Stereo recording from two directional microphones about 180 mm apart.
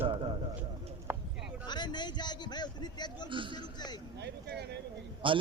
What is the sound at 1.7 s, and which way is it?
A man's voice, 25° left (ahead or behind).